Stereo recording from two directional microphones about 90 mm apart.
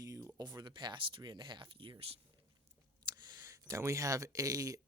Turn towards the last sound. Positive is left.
turn(degrees=-40)  # may be behind; listen again after turning